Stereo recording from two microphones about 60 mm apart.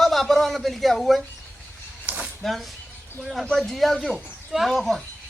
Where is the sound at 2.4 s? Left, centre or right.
Centre.